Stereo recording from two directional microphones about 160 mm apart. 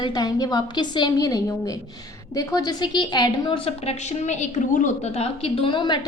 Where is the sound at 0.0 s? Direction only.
25° left (ahead or behind).